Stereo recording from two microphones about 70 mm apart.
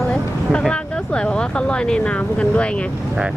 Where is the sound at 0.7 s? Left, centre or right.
Centre.